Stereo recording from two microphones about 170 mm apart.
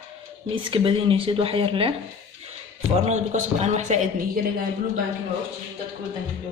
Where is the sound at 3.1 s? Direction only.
40° right (ahead or behind).